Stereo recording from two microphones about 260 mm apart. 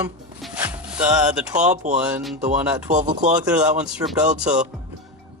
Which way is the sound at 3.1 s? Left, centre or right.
Right.